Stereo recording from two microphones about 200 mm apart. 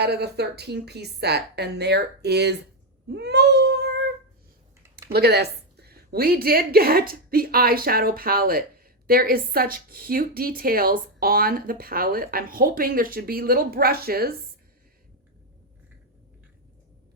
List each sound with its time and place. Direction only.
0.0 s a woman's voice: 55° right (ahead or behind)
3.1 s child singing: 55° right (ahead or behind)
4.8 s typing: 15° right (ahead or behind)
5.1 s a woman's voice: 55° right (ahead or behind)